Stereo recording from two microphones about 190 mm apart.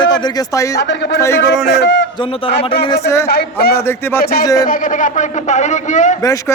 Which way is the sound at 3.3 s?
55° left (ahead or behind).